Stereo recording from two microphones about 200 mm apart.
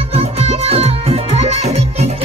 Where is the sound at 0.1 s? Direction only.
30° right (ahead or behind).